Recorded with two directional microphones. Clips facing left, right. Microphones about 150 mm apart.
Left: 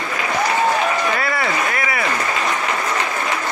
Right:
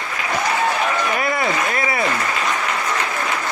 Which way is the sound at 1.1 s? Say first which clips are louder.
Right 1 dB; 20° right (ahead or behind).